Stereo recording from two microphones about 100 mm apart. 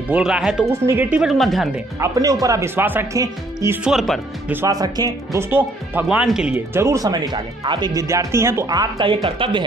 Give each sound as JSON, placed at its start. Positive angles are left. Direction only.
{"t": 0.1, "sound": "speech", "side_deg": -5}
{"t": 0.7, "sound": "speech", "side_deg": -25}
{"t": 1.1, "sound": "a woman's voice", "side_deg": 0}
{"t": 2.0, "sound": "speech", "side_deg": -35}
{"t": 2.7, "sound": "speech", "side_deg": -20}
{"t": 3.8, "sound": "a woman's voice", "side_deg": 0}
{"t": 4.6, "sound": "speech", "side_deg": -40}
{"t": 5.4, "sound": "speech", "side_deg": -20}
{"t": 6.0, "sound": "speech", "side_deg": -5}
{"t": 6.7, "sound": "speech", "side_deg": -30}
{"t": 7.9, "sound": "speech", "side_deg": -30}
{"t": 8.6, "sound": "speech", "side_deg": -40}
{"t": 9.0, "sound": "speech", "side_deg": -60}